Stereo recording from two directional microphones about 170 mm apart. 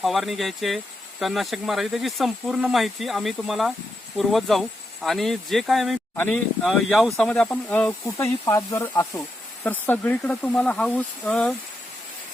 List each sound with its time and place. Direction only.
0.0 s speech: centre (ahead or behind)